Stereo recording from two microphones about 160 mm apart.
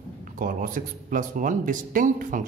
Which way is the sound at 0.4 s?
55° right (ahead or behind).